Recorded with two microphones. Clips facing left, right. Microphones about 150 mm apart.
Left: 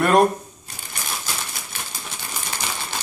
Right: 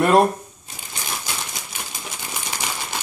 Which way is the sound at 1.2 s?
20° right (ahead or behind).